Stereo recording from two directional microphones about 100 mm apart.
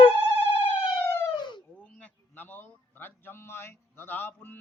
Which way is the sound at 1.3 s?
50° left (ahead or behind).